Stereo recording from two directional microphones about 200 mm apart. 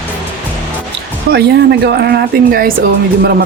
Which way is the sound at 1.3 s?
55° right (ahead or behind).